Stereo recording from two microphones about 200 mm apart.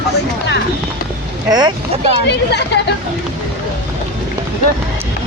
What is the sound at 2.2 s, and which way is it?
Speech, 60° left (ahead or behind).